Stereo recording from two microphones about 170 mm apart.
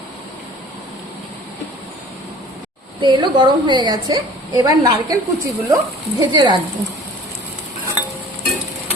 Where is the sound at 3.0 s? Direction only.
25° right (ahead or behind).